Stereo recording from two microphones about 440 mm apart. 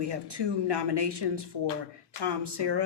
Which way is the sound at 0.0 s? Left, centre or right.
Right.